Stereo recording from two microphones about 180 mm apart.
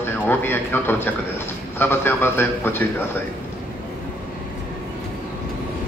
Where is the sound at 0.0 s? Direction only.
10° left (ahead or behind).